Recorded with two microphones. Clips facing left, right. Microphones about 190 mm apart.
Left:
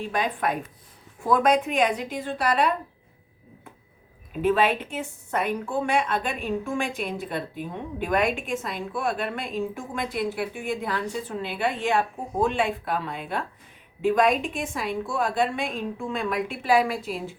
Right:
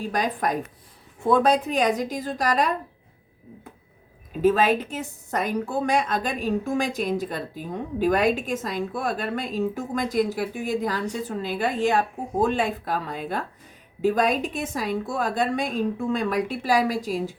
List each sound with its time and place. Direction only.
0.1 s a woman's voice: 40° right (ahead or behind)
4.4 s a woman's voice: 40° right (ahead or behind)